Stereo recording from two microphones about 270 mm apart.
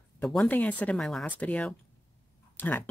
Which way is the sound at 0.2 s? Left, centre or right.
Centre.